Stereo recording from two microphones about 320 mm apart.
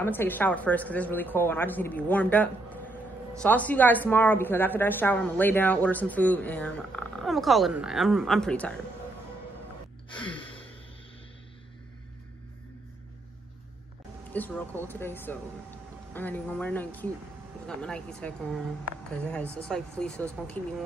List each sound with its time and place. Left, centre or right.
0.0 s a woman's voice: centre
10.1 s gasp: centre
14.3 s a woman's voice: centre